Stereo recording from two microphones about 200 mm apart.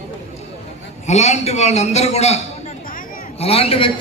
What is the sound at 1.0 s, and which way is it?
A man's voice, 35° left (ahead or behind).